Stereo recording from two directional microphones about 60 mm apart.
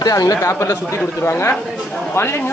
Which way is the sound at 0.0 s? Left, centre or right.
Left.